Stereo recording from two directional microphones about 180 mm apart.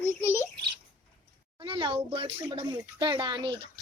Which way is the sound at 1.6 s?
30° right (ahead or behind).